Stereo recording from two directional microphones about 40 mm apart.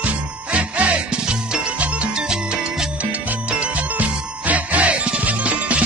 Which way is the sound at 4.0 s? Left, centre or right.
Right.